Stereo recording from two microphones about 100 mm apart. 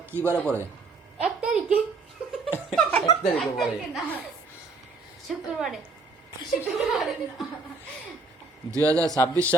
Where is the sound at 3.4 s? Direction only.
Centre (ahead or behind).